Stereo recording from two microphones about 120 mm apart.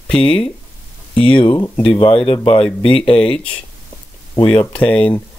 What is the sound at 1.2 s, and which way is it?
Speech, 45° left (ahead or behind).